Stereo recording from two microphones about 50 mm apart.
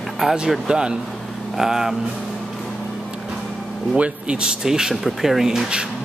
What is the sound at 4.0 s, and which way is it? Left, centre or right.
Speech, right.